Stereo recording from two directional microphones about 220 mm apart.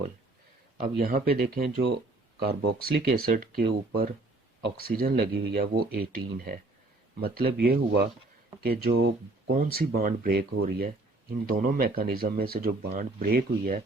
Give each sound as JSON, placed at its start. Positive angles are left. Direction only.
{"t": 0.8, "sound": "speech", "side_deg": -40}